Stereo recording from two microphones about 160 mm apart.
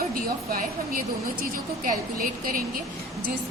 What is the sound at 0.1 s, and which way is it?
A woman's voice, 60° right (ahead or behind).